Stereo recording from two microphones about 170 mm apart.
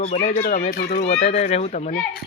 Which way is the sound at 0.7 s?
60° left (ahead or behind).